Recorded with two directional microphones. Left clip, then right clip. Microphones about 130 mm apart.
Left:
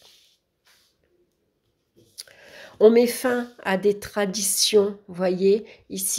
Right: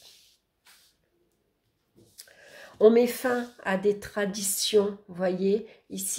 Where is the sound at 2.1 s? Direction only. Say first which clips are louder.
Left 6 dB; 55° left (ahead or behind).